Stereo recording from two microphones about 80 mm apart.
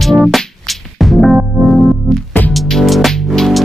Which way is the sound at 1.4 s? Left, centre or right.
Centre.